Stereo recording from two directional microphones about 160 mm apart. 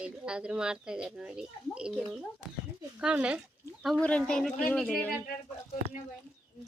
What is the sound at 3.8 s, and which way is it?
Speech, 5° left (ahead or behind).